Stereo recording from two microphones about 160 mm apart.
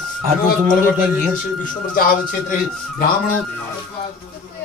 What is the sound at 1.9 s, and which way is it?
A man's voice, 65° left (ahead or behind).